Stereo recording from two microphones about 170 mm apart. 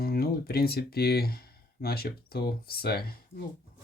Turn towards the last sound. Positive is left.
turn(degrees=65)  # may be behind; listen again after turning